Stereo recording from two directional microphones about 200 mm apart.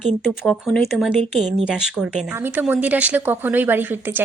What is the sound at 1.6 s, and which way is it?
Speech, 5° right (ahead or behind).